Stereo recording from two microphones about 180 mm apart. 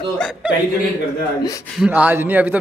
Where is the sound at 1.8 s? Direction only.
10° right (ahead or behind).